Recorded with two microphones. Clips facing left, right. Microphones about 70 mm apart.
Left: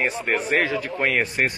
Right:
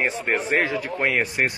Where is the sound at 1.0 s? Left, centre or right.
Centre.